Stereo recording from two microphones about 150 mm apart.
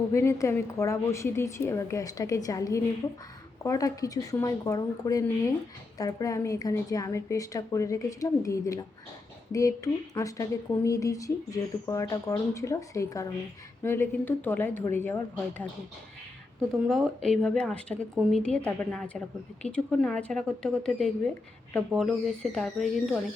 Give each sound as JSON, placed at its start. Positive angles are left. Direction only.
{"t": 0.1, "sound": "a woman's voice", "side_deg": 20}
{"t": 16.7, "sound": "speech", "side_deg": 0}